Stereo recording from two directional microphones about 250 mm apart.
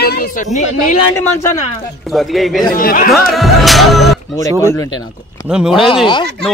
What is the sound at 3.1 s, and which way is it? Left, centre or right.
A man's voice, centre.